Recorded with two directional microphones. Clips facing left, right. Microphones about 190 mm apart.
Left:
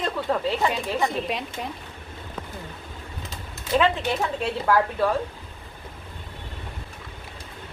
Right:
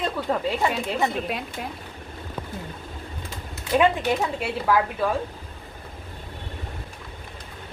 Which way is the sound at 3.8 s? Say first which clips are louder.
Right 2 dB; 10° right (ahead or behind).